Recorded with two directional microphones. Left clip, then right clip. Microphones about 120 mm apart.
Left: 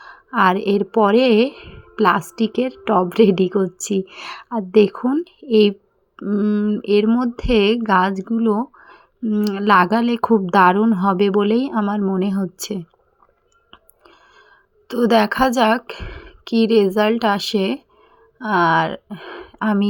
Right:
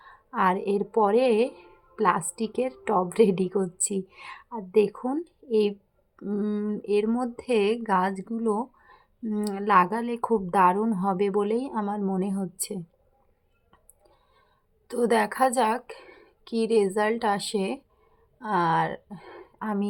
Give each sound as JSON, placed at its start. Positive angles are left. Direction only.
{"t": 0.0, "sound": "speech", "side_deg": 40}
{"t": 6.1, "sound": "speech", "side_deg": 20}
{"t": 6.8, "sound": "speech", "side_deg": 35}
{"t": 14.8, "sound": "a woman's voice", "side_deg": 30}